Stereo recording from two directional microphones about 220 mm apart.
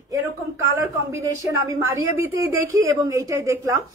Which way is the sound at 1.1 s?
15° right (ahead or behind).